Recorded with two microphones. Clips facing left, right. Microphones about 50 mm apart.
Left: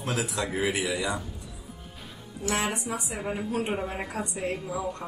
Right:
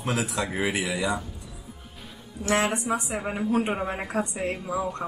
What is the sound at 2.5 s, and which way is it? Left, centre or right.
Speech, right.